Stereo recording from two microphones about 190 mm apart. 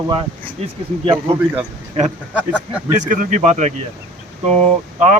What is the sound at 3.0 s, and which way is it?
Speech, 40° right (ahead or behind).